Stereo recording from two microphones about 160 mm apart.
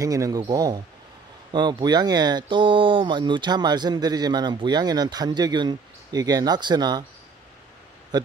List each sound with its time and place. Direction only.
0.0 s speech: 20° right (ahead or behind)
8.1 s speech: 25° right (ahead or behind)